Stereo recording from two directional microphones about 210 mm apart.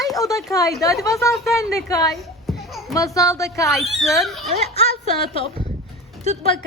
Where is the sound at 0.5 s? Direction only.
15° left (ahead or behind).